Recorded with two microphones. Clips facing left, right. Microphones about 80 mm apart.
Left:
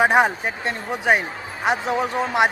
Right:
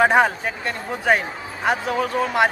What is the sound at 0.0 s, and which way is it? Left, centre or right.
Speech, centre.